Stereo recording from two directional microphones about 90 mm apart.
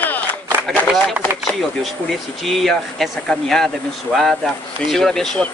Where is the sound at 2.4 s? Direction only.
Centre (ahead or behind).